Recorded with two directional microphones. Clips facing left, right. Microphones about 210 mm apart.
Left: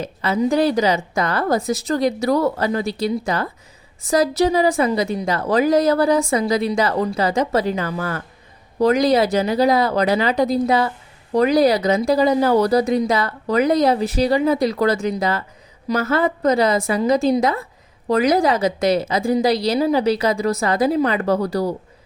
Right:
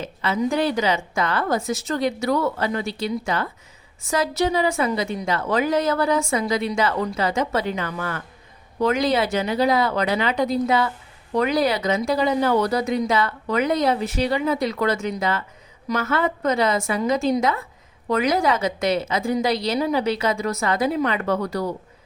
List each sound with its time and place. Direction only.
0.0 s a woman's voice: 40° left (ahead or behind)